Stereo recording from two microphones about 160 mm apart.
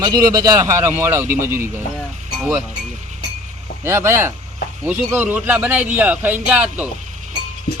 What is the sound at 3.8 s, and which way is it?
Speech, 15° right (ahead or behind).